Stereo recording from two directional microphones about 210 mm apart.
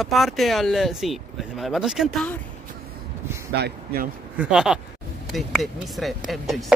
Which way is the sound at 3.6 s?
50° right (ahead or behind).